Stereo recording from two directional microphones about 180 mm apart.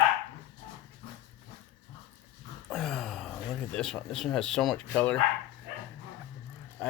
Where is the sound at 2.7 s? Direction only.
Centre (ahead or behind).